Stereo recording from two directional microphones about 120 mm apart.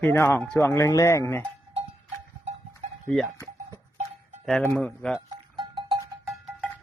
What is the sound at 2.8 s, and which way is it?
Livestock, 90° right.